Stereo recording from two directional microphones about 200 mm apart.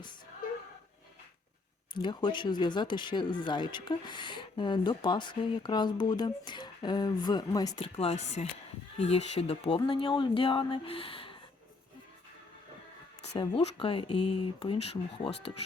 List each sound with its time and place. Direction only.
1.9 s speech: 20° left (ahead or behind)
7.9 s speech: 30° left (ahead or behind)
13.2 s speech: 30° left (ahead or behind)